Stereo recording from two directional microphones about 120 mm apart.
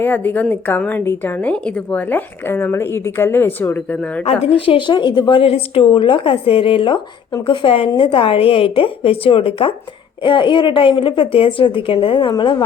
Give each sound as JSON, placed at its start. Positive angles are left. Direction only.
{"t": 0.0, "sound": "a woman's voice", "side_deg": 15}
{"t": 4.3, "sound": "speech", "side_deg": 55}